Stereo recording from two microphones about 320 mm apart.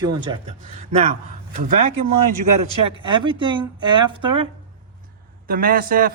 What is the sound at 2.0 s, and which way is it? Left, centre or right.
Speech, right.